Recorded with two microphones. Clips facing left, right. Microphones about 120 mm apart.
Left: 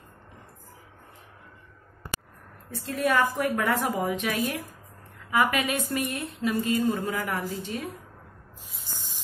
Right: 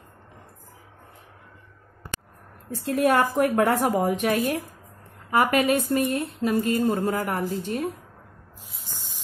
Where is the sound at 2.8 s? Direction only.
55° right (ahead or behind); by 7.4 s 35° right (ahead or behind).